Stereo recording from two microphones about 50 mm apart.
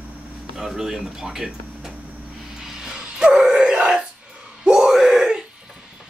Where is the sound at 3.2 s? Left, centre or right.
Centre.